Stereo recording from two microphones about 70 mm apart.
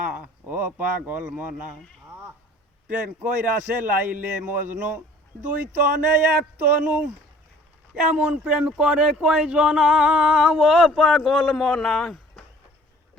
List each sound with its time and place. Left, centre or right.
0.0 s a man's voice: right
2.8 s a man's voice: right
8.0 s a sound: centre
10.6 s a man's voice: centre